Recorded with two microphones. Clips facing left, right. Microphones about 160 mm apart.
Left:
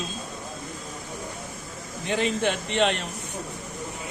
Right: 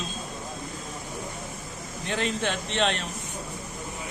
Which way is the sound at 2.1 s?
10° left (ahead or behind).